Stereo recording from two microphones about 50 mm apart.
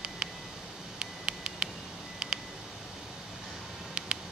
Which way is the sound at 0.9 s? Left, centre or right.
Centre.